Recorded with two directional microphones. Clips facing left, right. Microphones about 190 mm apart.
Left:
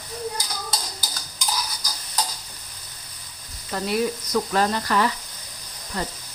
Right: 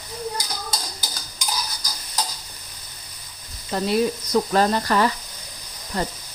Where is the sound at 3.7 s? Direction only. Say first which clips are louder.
Right 3 dB; 25° right (ahead or behind).